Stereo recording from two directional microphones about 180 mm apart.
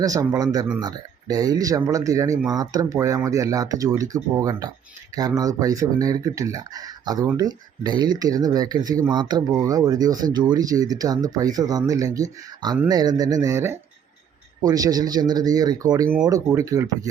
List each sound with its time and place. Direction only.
0.0 s speech: 20° right (ahead or behind)